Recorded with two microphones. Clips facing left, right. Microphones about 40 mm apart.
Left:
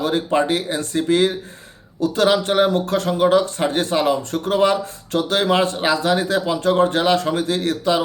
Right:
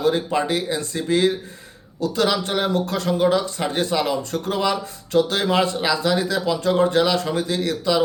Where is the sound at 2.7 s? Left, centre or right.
Left.